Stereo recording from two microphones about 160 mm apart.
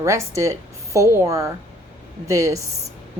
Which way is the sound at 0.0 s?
20° right (ahead or behind).